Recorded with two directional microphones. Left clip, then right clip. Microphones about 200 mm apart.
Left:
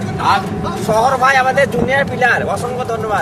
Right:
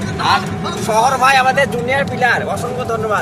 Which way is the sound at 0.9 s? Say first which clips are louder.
Even; 15° left (ahead or behind).